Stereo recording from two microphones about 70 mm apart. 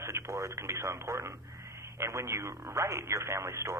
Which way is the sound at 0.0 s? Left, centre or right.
Right.